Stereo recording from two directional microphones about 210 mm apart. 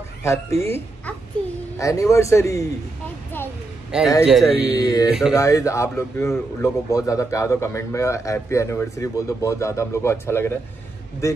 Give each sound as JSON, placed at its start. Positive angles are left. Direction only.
{"t": 0.2, "sound": "speech", "side_deg": 15}
{"t": 1.8, "sound": "speech", "side_deg": 15}
{"t": 3.9, "sound": "speech", "side_deg": -5}
{"t": 4.7, "sound": "speech", "side_deg": 15}